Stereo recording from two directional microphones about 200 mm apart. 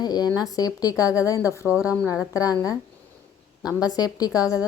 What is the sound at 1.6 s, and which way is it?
Speech, 5° right (ahead or behind).